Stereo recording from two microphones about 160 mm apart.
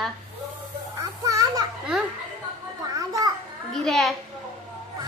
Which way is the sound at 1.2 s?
20° right (ahead or behind).